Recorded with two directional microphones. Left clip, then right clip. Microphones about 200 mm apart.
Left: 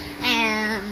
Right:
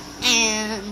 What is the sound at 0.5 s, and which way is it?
Speech, 5° right (ahead or behind).